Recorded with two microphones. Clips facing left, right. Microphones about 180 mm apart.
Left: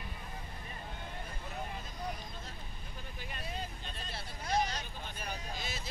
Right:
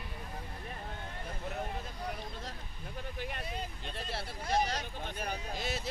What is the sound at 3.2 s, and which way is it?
Vehicle, 65° right (ahead or behind).